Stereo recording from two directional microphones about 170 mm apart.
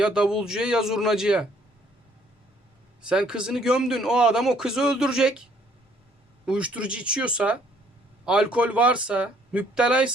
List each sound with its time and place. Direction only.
0.0 s speech: 5° right (ahead or behind)
3.0 s speech: 5° right (ahead or behind)
6.4 s speech: 5° right (ahead or behind)